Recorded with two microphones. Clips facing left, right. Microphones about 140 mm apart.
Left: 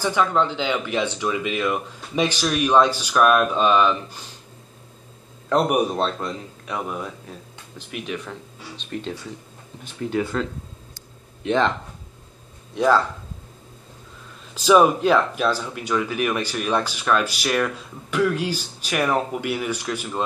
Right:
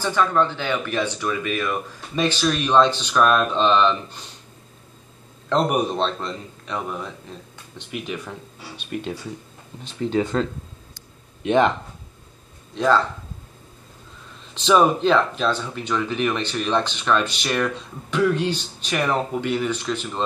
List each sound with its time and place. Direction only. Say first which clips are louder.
0.0 s speech: even; 15° left (ahead or behind)
5.5 s speech: left 1 dB; 10° left (ahead or behind); by 9.1 s 10° right (ahead or behind)
10.0 s speech: right 2 dB; 25° right (ahead or behind)
11.4 s speech: right 3 dB; 15° right (ahead or behind)
12.7 s speech: left 1 dB; 10° left (ahead or behind)
14.5 s speech: left 2 dB; 5° left (ahead or behind)